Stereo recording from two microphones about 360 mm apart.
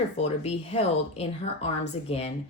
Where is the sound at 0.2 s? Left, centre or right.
Centre.